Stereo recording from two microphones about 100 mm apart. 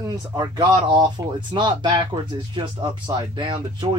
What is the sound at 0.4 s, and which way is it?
Speech, 45° right (ahead or behind).